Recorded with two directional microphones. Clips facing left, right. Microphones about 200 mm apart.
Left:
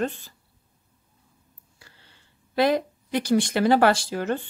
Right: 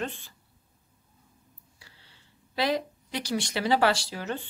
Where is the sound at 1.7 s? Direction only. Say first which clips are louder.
Left 5 dB; 50° left (ahead or behind).